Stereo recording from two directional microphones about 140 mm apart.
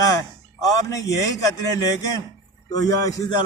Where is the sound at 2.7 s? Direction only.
25° left (ahead or behind).